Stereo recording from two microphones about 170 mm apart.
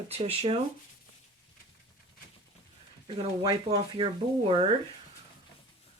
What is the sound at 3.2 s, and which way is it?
Speech, 30° right (ahead or behind).